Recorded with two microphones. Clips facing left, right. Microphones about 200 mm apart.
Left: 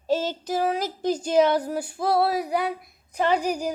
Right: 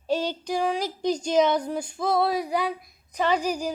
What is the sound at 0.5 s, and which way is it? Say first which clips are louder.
Speech: left 1 dB; 5° left (ahead or behind).